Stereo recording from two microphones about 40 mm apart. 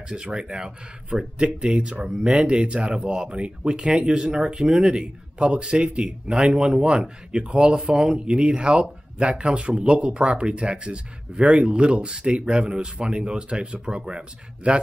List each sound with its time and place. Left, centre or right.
0.1 s speech: centre
2.0 s speech: centre
2.4 s speech: right